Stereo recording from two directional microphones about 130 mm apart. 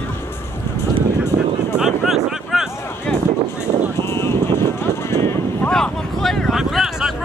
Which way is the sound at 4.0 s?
20° left (ahead or behind).